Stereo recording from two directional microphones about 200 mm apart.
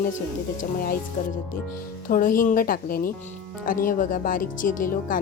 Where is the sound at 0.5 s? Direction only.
45° left (ahead or behind).